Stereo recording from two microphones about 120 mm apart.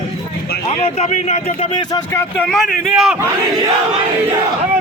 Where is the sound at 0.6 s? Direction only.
55° left (ahead or behind).